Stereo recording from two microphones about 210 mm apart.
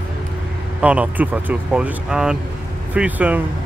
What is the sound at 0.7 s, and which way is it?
Speech, 5° right (ahead or behind).